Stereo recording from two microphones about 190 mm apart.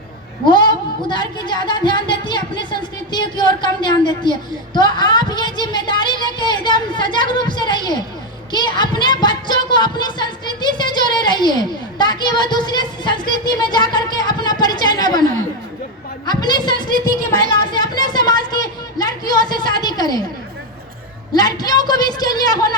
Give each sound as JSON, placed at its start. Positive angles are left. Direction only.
{"t": 0.4, "sound": "a woman's voice", "side_deg": 25}
{"t": 16.2, "sound": "a woman's voice", "side_deg": 20}
{"t": 17.7, "sound": "a sound", "side_deg": 20}
{"t": 19.5, "sound": "a woman's voice", "side_deg": 20}
{"t": 21.3, "sound": "a woman's voice", "side_deg": 20}